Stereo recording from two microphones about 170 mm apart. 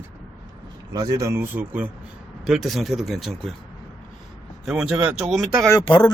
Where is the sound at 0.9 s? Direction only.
20° right (ahead or behind); by 3.6 s centre (ahead or behind).